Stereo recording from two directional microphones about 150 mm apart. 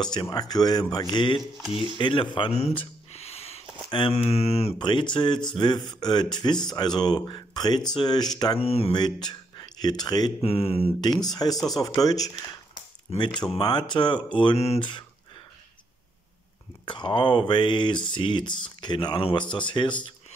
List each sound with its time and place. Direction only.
0.0 s speech: 30° left (ahead or behind)
1.4 s speech: centre (ahead or behind)
2.0 s speech: 35° left (ahead or behind)
4.7 s speech: 30° left (ahead or behind)
8.9 s speech: 30° left (ahead or behind)
10.4 s speech: 40° left (ahead or behind)
11.0 s speech: 25° left (ahead or behind)
11.5 s speech: centre (ahead or behind)
12.0 s speech: 25° left (ahead or behind)
13.1 s speech: 45° left (ahead or behind)
13.6 s speech: 30° left (ahead or behind)
16.8 s speech: 30° left (ahead or behind)